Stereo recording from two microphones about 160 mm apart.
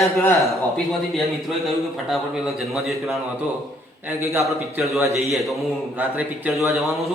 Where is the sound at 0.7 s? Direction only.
Centre (ahead or behind).